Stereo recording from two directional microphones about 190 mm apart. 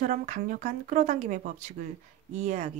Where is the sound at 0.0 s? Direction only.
45° right (ahead or behind).